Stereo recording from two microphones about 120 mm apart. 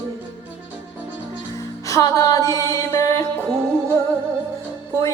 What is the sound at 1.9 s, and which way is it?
Music, 30° left (ahead or behind).